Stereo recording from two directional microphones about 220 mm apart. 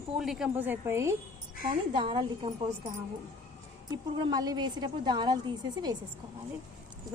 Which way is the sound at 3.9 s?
20° right (ahead or behind).